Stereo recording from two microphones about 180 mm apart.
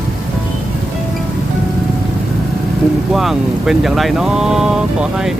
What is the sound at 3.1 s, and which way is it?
Speech, centre (ahead or behind).